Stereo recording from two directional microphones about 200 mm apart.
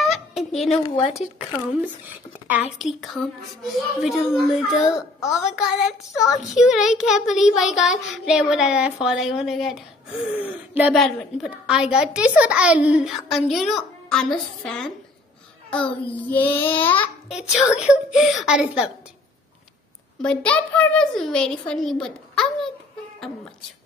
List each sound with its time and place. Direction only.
0.0 s fowl: centre (ahead or behind)
0.7 s speech: 30° left (ahead or behind)
2.8 s child singing: centre (ahead or behind)
17.3 s child singing: centre (ahead or behind)
20.2 s a child's voice: 5° left (ahead or behind)